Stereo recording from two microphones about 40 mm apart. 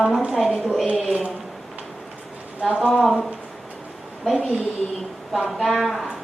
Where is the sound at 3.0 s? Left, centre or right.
Centre.